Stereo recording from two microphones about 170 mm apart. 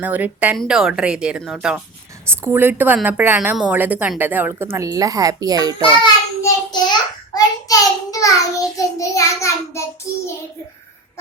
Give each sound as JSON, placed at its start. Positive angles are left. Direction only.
{"t": 0.0, "sound": "a woman's voice", "side_deg": -10}
{"t": 6.0, "sound": "child singing", "side_deg": 25}
{"t": 7.3, "sound": "a child's voice", "side_deg": 20}